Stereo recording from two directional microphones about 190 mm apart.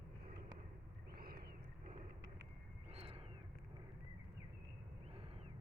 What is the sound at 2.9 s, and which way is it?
Wild animals, 30° right (ahead or behind).